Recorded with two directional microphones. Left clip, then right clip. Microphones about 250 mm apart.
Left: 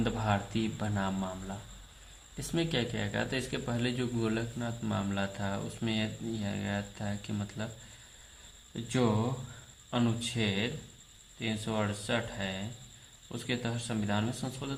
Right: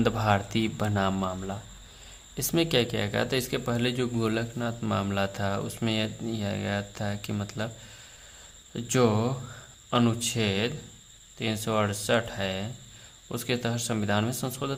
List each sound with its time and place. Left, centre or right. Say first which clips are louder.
0.0 s a man's voice: right 7 dB; right
8.7 s a man's voice: right 6 dB; right